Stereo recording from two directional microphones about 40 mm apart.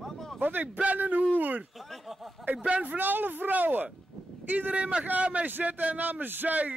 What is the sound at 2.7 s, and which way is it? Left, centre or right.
A man's voice, right.